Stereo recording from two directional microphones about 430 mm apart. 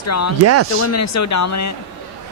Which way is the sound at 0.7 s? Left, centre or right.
Left.